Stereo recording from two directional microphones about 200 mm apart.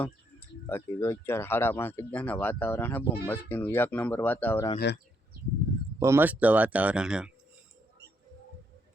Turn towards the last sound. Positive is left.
turn(degrees=-5)  # may be behind; listen again after turning